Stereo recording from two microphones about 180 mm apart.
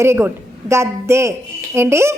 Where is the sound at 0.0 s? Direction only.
15° right (ahead or behind).